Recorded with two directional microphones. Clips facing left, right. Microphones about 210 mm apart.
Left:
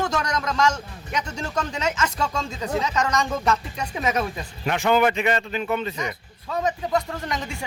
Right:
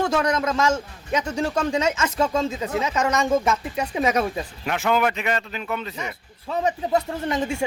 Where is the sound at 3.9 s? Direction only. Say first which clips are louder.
Right 3 dB; 30° right (ahead or behind).